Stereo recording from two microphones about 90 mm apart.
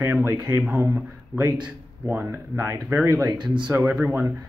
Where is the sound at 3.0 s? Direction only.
45° right (ahead or behind).